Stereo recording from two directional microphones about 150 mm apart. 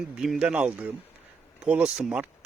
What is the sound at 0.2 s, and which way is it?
Speech, 5° right (ahead or behind).